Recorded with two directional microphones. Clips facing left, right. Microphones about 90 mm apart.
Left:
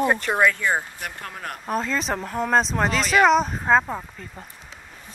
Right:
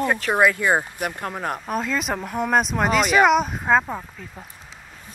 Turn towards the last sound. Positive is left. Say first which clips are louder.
# even
turn(degrees=0)  # may be behind; listen again after turning